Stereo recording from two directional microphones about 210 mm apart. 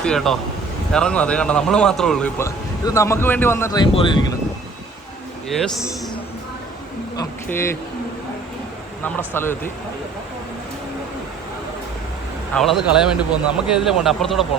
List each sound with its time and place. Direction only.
0.0 s a man's voice: centre (ahead or behind); by 4.3 s 25° left (ahead or behind)
5.5 s a man's voice: centre (ahead or behind)
7.2 s a sound: 10° left (ahead or behind)
9.1 s speech: 10° left (ahead or behind)
12.5 s a man's voice: centre (ahead or behind)